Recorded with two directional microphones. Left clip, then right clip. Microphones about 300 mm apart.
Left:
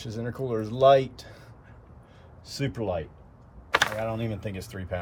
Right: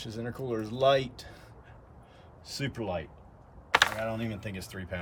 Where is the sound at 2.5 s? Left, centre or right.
Centre.